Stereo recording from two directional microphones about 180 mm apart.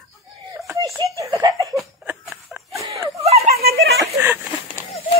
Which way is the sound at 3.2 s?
35° right (ahead or behind).